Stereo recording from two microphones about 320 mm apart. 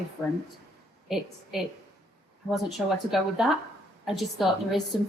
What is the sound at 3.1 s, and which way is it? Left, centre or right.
A woman's voice, centre.